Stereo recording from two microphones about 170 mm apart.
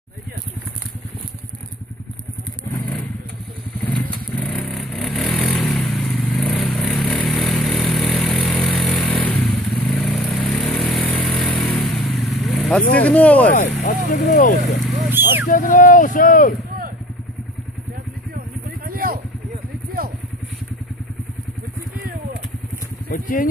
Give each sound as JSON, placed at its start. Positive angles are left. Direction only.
{"t": 2.7, "sound": "vehicle", "side_deg": 5}
{"t": 12.9, "sound": "speech", "side_deg": 10}
{"t": 13.5, "sound": "speech", "side_deg": 50}
{"t": 14.8, "sound": "vehicle", "side_deg": 0}
{"t": 15.0, "sound": "vehicle", "side_deg": -10}
{"t": 15.4, "sound": "speech", "side_deg": 50}
{"t": 18.9, "sound": "vehicle", "side_deg": -60}
{"t": 23.0, "sound": "speech", "side_deg": 55}